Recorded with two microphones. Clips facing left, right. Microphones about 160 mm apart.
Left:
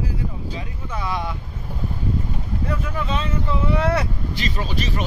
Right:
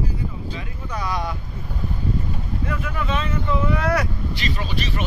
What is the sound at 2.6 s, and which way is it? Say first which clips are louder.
Vehicle: left 1 dB; 30° left (ahead or behind).